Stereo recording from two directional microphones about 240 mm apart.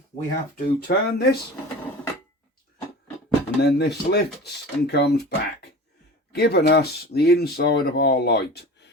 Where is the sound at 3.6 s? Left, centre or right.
Left.